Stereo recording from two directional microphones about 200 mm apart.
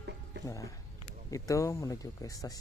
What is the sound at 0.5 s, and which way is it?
Speech, 15° left (ahead or behind).